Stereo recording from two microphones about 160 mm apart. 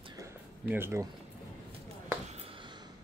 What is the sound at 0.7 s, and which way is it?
Speech, 15° right (ahead or behind).